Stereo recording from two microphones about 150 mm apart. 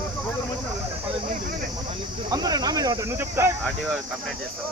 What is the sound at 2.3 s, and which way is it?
Speech, 25° right (ahead or behind).